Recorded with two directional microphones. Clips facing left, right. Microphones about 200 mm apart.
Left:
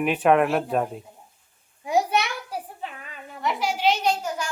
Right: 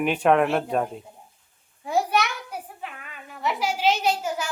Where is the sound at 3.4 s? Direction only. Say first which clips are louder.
Even; 5° right (ahead or behind).